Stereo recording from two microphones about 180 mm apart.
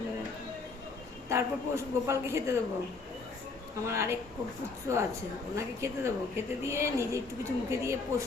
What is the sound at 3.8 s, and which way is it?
Speech, 15° right (ahead or behind).